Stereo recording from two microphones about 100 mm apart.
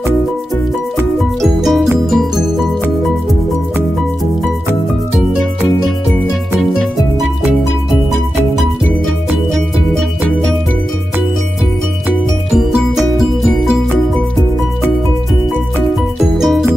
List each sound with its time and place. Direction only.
1.4 s music: centre (ahead or behind)
9.3 s music: centre (ahead or behind)
12.5 s music: centre (ahead or behind)
15.9 s music: centre (ahead or behind)